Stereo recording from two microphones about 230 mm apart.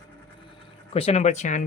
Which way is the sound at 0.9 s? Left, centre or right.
Left.